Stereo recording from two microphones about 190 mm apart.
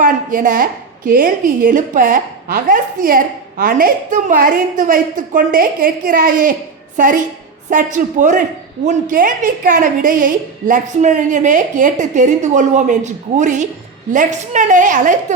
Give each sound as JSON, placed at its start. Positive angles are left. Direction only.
{"t": 0.0, "sound": "a woman's voice", "side_deg": -45}